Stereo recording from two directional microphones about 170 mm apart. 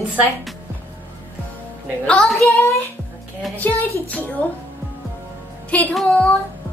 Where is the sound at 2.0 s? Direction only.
5° left (ahead or behind).